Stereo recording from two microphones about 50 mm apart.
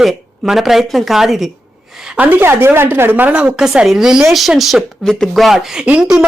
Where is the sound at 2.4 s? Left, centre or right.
Right.